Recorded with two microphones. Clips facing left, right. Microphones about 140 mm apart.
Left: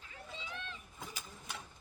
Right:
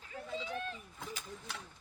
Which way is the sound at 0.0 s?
40° right (ahead or behind).